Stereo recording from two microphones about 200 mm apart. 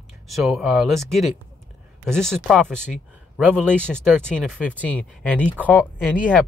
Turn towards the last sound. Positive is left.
turn(degrees=10)  # may be behind; listen again after turning